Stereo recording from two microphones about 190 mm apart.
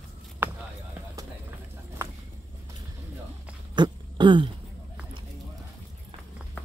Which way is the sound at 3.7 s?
25° right (ahead or behind).